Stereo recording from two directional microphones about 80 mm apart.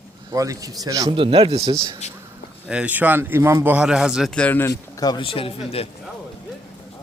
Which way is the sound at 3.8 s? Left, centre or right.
Centre.